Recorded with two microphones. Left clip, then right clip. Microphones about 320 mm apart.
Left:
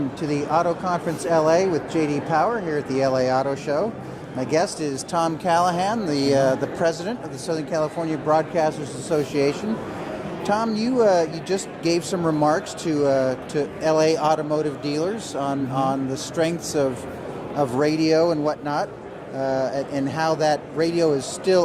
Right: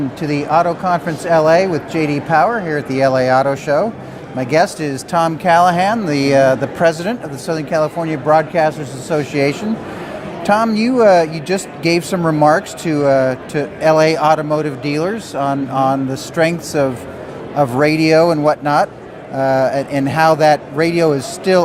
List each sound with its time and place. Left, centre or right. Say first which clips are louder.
0.2 s speech: right 7 dB; right